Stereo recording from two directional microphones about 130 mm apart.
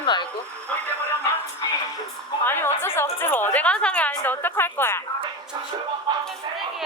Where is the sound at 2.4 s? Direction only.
20° left (ahead or behind).